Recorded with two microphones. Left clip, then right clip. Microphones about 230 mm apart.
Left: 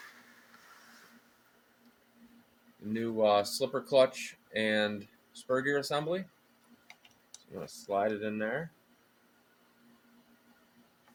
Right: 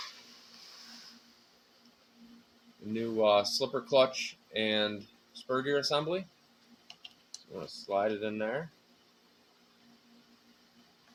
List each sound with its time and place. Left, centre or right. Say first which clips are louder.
2.9 s speech: right 1 dB; centre
7.9 s speech: even; centre